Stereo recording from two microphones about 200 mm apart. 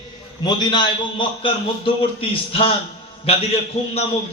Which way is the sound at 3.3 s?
30° left (ahead or behind).